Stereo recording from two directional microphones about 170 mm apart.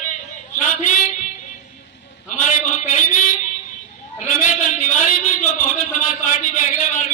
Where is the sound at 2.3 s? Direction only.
45° left (ahead or behind).